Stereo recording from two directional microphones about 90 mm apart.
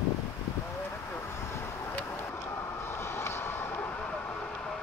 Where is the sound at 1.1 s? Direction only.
25° left (ahead or behind).